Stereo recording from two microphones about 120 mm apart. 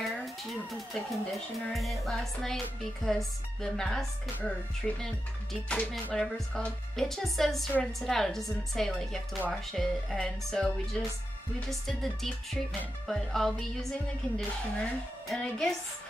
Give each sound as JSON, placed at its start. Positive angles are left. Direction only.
{"t": 0.0, "sound": "speech", "side_deg": 0}